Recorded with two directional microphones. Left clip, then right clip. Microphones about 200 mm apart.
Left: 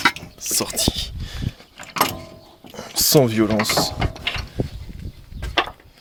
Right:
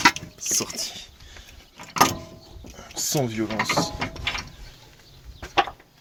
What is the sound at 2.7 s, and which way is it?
Speech, 50° left (ahead or behind).